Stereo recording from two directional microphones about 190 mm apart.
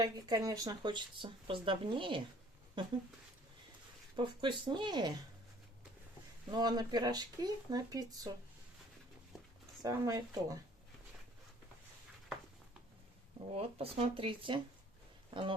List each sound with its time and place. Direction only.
0.0 s speech: 20° right (ahead or behind)
4.2 s speech: 25° right (ahead or behind)
6.5 s speech: 20° right (ahead or behind)
9.8 s speech: 20° right (ahead or behind)
13.5 s speech: 30° right (ahead or behind)